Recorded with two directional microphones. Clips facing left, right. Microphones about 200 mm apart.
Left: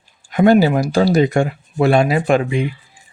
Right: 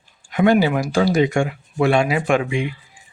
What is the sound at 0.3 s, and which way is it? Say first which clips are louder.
Speech: left 4 dB; 40° left (ahead or behind).